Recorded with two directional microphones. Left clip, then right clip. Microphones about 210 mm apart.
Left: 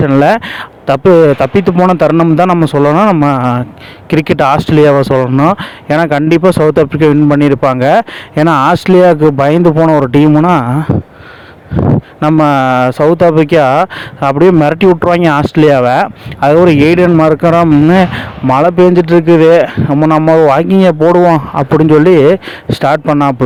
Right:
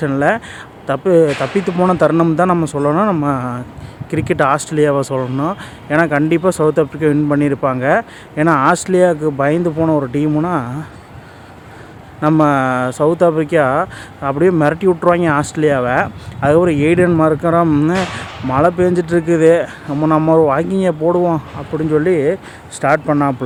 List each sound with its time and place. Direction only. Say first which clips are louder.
0.0 s speech: left 7 dB; 40° left (ahead or behind)
12.4 s speech: left 6 dB; 40° left (ahead or behind)
17.7 s speech: left 8 dB; 30° left (ahead or behind)